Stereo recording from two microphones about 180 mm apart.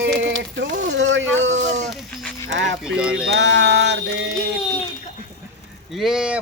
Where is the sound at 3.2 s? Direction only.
70° right (ahead or behind).